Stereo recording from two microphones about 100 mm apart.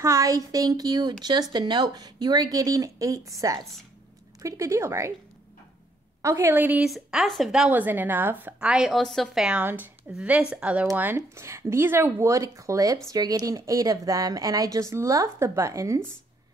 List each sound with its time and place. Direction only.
0.0 s a woman's voice: 30° right (ahead or behind)
6.2 s speech: 25° right (ahead or behind)
6.9 s speech: 5° right (ahead or behind)
7.7 s speech: 20° right (ahead or behind)
8.5 s speech: 10° right (ahead or behind)
9.6 s speech: 20° right (ahead or behind)
11.0 s a woman's voice: 20° right (ahead or behind)